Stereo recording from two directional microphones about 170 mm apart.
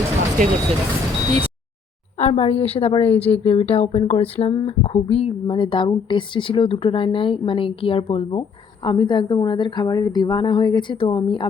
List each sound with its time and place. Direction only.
2.1 s a woman's voice: 40° left (ahead or behind)
3.1 s speech: 10° left (ahead or behind)
3.5 s speech: 35° left (ahead or behind)